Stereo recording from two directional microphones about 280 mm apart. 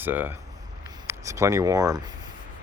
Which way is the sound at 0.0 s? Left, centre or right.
Centre.